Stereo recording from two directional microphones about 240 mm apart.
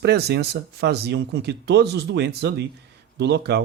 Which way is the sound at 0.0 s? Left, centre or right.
Right.